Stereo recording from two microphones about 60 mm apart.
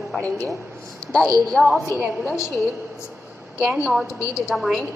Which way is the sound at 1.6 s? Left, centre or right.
Right.